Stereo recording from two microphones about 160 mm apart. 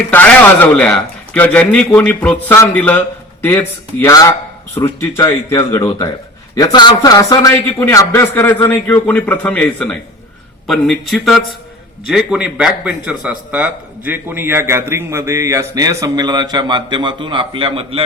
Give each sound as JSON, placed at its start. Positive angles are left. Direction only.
{"t": 0.1, "sound": "a man's voice", "side_deg": 10}